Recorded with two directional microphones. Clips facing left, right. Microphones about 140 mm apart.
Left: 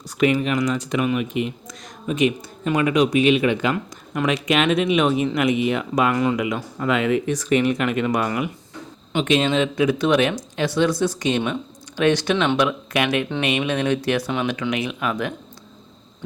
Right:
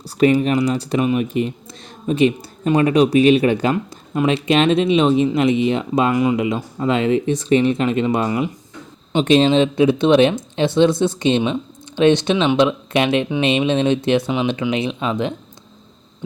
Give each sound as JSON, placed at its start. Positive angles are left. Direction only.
{"t": 0.2, "sound": "speech", "side_deg": -35}